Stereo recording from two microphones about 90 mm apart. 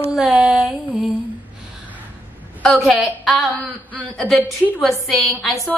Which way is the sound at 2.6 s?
Centre (ahead or behind).